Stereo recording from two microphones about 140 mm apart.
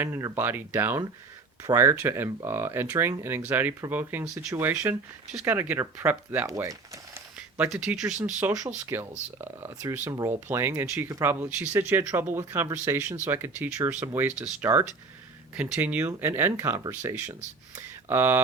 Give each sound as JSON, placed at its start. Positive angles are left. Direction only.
{"t": 0.0, "sound": "speech", "side_deg": -15}
{"t": 7.3, "sound": "speech", "side_deg": -10}